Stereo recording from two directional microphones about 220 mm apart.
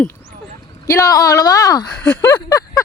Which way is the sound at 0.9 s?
15° left (ahead or behind).